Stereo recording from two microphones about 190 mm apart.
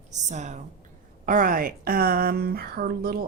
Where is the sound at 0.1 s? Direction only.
40° right (ahead or behind).